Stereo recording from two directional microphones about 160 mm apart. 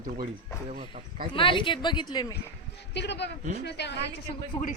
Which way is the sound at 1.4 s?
30° left (ahead or behind).